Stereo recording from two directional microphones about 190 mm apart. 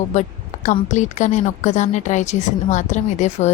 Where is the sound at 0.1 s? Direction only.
40° left (ahead or behind).